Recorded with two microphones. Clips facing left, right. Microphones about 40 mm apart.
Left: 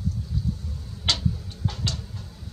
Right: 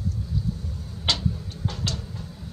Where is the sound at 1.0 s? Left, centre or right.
Centre.